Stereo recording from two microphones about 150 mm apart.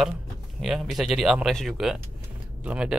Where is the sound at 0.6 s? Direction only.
Centre (ahead or behind).